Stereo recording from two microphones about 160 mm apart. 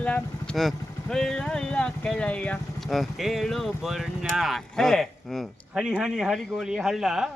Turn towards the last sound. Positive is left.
turn(degrees=-5)  # may be behind; listen again after turning